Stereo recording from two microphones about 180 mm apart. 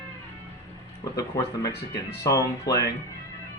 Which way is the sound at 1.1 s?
20° left (ahead or behind).